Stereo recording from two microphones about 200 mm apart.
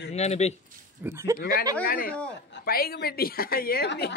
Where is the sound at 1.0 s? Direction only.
15° right (ahead or behind).